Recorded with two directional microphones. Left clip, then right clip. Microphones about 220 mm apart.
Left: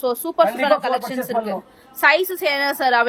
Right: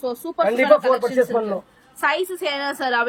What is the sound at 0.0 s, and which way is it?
Speech, centre (ahead or behind).